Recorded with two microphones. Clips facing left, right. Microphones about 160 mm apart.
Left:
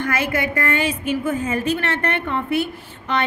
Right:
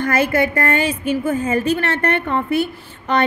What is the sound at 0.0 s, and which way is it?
A woman's voice, 40° right (ahead or behind).